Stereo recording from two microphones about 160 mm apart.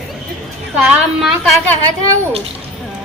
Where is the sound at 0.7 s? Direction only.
5° right (ahead or behind).